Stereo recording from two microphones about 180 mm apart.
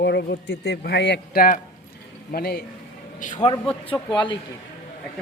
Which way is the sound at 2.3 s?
60° left (ahead or behind).